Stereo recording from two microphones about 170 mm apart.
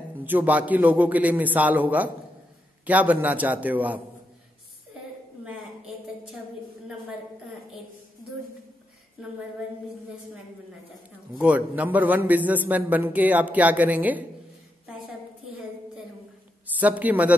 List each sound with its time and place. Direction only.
0.2 s a man's voice: 10° right (ahead or behind)
11.3 s a man's voice: 10° right (ahead or behind)
16.8 s a man's voice: 10° right (ahead or behind)